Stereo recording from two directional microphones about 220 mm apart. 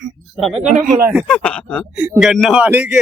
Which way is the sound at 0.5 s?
35° right (ahead or behind).